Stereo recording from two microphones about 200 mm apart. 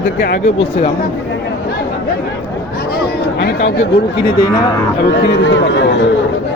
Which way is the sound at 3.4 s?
60° left (ahead or behind).